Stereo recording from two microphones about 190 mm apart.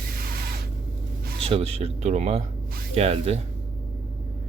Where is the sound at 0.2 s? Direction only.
50° right (ahead or behind).